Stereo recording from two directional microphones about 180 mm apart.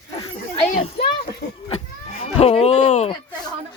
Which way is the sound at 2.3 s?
30° left (ahead or behind).